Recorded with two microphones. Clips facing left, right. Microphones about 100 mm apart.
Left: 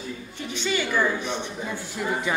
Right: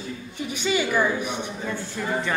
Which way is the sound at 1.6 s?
15° left (ahead or behind).